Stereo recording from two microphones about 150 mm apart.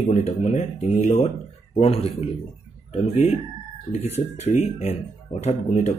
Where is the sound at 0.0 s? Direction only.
45° left (ahead or behind).